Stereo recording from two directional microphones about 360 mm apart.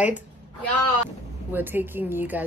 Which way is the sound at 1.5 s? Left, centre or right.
Centre.